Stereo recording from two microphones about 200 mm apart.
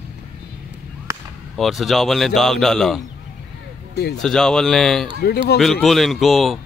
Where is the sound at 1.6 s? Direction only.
Centre (ahead or behind).